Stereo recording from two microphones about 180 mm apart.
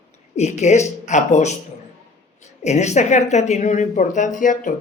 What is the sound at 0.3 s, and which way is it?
A woman's voice, 40° left (ahead or behind).